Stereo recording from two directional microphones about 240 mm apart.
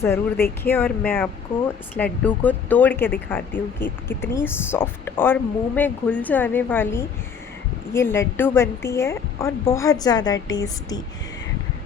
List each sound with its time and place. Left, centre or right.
0.0 s speech: centre